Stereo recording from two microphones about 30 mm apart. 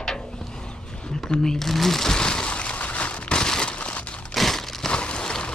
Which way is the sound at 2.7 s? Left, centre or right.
Left.